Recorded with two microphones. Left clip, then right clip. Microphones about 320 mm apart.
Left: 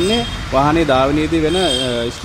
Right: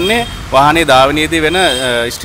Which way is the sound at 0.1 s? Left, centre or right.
Right.